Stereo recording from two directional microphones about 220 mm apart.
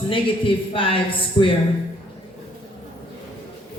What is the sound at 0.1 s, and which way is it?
Speech, 25° left (ahead or behind).